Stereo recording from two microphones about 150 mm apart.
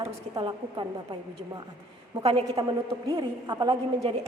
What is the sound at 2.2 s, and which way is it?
Speech, 40° right (ahead or behind).